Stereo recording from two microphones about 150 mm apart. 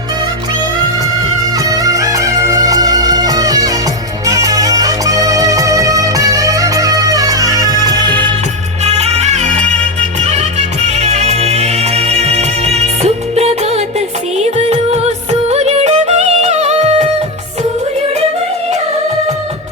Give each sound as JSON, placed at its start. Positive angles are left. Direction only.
{"t": 1.5, "sound": "music", "side_deg": -25}
{"t": 8.8, "sound": "music", "side_deg": -45}